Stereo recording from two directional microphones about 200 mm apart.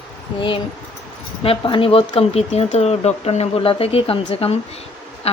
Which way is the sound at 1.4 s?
25° left (ahead or behind).